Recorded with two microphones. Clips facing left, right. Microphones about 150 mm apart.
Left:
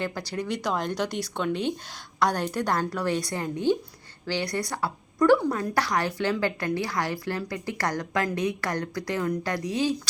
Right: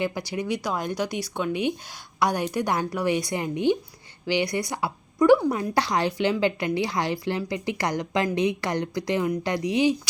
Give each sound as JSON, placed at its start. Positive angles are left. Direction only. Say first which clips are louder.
{"t": 0.0, "sound": "a woman's voice", "louder": "right 3 dB", "side_deg": -15}